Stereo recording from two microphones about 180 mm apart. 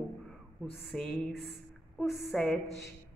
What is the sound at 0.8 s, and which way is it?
A woman's voice, 5° left (ahead or behind).